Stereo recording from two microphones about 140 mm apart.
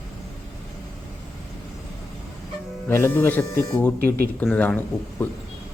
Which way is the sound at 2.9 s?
15° left (ahead or behind).